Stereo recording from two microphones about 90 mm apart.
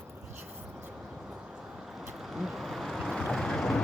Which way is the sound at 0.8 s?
10° right (ahead or behind).